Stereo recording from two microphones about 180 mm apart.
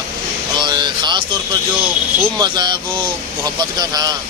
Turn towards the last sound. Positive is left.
turn(degrees=-20)  # may be behind; listen again after turning